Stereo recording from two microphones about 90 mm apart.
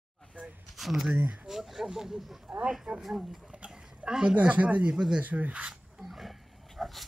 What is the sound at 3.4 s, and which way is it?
Speech, 15° right (ahead or behind).